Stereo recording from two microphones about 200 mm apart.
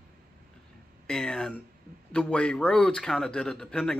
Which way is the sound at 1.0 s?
5° left (ahead or behind).